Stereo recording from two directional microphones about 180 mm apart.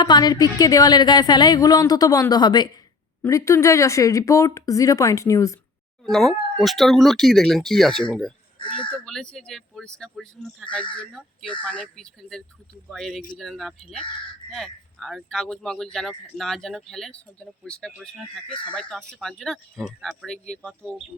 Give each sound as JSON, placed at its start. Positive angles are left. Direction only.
{"t": 0.0, "sound": "speech", "side_deg": 20}
{"t": 6.1, "sound": "speech", "side_deg": 0}
{"t": 9.3, "sound": "speech", "side_deg": 0}